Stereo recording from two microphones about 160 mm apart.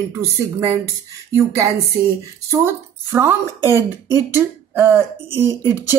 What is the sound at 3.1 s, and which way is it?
Speech, 15° right (ahead or behind).